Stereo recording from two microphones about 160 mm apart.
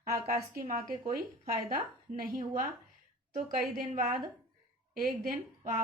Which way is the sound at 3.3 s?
55° right (ahead or behind).